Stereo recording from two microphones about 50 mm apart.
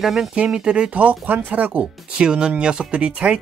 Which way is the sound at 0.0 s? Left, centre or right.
Centre.